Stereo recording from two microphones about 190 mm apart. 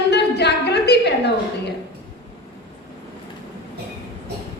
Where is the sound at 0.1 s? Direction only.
60° left (ahead or behind).